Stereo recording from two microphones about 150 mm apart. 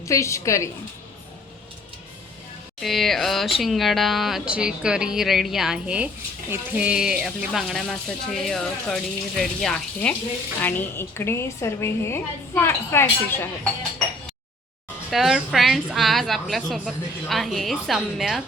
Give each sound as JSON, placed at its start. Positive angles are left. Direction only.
{"t": 0.0, "sound": "a woman's voice", "side_deg": 20}
{"t": 2.8, "sound": "a woman's voice", "side_deg": 0}
{"t": 15.1, "sound": "speech", "side_deg": 0}